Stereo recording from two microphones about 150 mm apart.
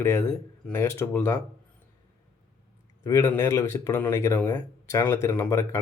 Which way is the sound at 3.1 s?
20° left (ahead or behind).